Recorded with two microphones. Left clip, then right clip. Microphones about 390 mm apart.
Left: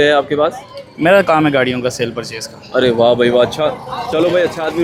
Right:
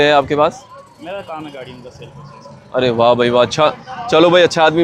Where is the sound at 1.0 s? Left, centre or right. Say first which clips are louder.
Left 17 dB; left.